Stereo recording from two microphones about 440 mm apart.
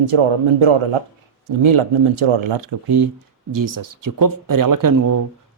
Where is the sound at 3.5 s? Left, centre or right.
Right.